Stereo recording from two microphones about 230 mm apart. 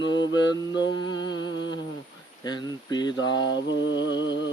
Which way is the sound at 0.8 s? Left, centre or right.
Centre.